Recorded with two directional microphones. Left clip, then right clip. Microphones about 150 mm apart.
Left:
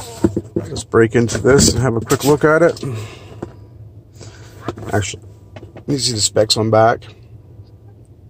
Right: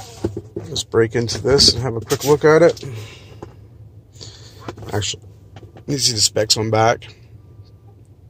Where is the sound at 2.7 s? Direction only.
40° left (ahead or behind).